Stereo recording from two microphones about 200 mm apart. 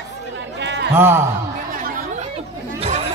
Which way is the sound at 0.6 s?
60° right (ahead or behind).